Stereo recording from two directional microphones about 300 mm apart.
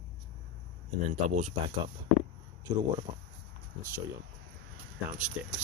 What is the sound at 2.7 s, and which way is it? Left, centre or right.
Speech, centre.